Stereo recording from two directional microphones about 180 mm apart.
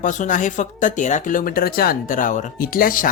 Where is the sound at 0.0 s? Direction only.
45° left (ahead or behind).